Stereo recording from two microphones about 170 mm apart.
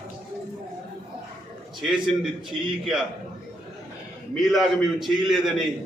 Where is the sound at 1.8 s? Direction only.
Centre (ahead or behind).